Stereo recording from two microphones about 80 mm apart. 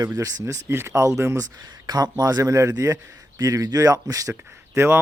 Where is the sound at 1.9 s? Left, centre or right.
Right.